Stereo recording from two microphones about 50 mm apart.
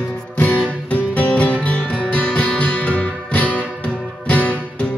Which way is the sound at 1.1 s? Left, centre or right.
Left.